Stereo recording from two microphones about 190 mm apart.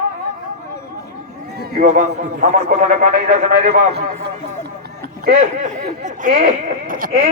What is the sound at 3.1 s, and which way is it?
Speech, 45° right (ahead or behind).